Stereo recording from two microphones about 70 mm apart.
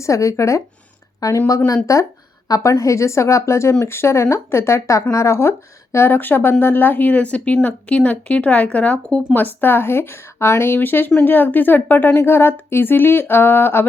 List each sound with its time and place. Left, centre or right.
0.0 s a woman's voice: left; by 9.2 s centre
9.3 s a woman's voice: left